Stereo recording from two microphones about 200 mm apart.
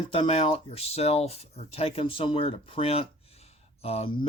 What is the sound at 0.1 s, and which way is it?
Speech, 30° left (ahead or behind).